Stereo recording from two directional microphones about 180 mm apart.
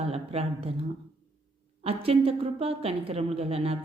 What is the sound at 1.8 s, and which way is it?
A woman's voice, 30° right (ahead or behind).